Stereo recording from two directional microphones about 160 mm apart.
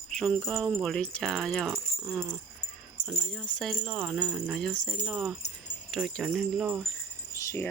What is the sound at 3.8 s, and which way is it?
Speech, 10° right (ahead or behind).